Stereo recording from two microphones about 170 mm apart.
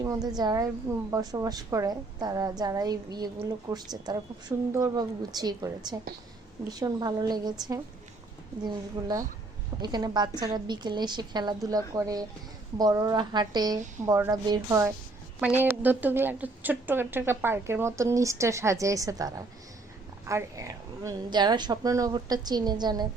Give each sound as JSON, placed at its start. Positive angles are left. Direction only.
{"t": 0.0, "sound": "a woman's voice", "side_deg": -20}
{"t": 8.6, "sound": "a woman's voice", "side_deg": -25}